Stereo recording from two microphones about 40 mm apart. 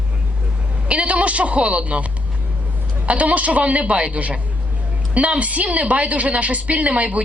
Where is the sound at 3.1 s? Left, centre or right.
Right.